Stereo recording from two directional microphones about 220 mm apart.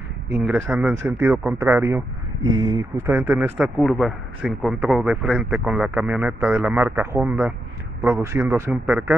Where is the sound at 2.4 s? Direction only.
60° right (ahead or behind).